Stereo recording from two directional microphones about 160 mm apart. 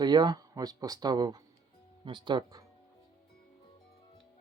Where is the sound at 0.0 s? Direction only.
25° right (ahead or behind).